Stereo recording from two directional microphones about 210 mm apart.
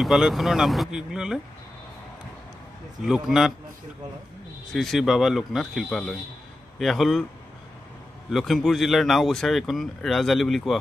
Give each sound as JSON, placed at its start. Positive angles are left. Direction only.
{"t": 0.0, "sound": "speech", "side_deg": 0}
{"t": 3.0, "sound": "speech", "side_deg": 0}
{"t": 4.7, "sound": "speech", "side_deg": 0}
{"t": 8.3, "sound": "speech", "side_deg": 0}